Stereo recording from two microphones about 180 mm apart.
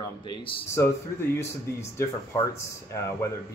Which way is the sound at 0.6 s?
15° left (ahead or behind).